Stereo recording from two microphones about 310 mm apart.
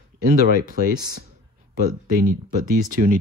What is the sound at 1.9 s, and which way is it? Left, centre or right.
Speech, right.